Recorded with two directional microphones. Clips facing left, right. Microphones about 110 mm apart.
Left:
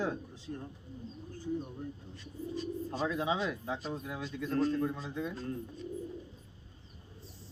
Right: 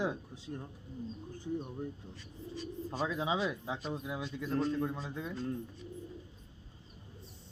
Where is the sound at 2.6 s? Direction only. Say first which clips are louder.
Left 1 dB; centre (ahead or behind).